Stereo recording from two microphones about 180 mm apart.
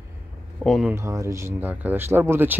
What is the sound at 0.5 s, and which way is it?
Speech, centre (ahead or behind).